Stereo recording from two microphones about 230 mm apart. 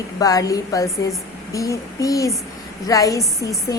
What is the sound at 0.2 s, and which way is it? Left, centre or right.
A woman's voice, centre.